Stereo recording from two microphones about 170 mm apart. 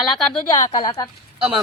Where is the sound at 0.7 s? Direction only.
45° left (ahead or behind).